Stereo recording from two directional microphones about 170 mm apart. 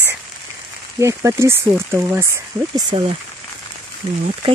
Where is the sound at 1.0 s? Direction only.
15° right (ahead or behind).